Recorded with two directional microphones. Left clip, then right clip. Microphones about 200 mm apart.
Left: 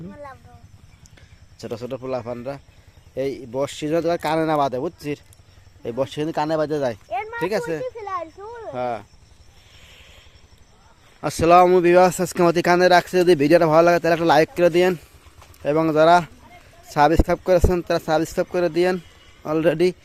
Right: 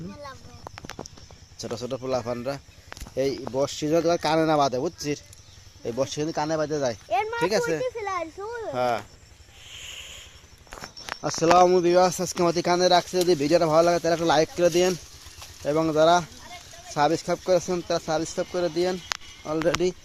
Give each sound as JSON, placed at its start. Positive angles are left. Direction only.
{"t": 1.5, "sound": "speech", "side_deg": 10}
{"t": 7.1, "sound": "a sound", "side_deg": -40}
{"t": 8.7, "sound": "speech", "side_deg": 0}
{"t": 9.6, "sound": "a sound", "side_deg": 0}
{"t": 11.3, "sound": "speech", "side_deg": 15}
{"t": 11.9, "sound": "speech", "side_deg": 35}